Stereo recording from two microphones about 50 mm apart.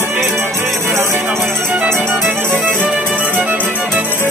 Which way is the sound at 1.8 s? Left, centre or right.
Right.